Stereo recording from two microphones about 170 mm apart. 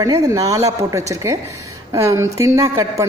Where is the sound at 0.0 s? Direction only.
20° right (ahead or behind).